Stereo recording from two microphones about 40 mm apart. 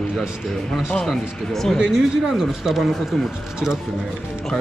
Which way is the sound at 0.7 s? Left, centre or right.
Centre.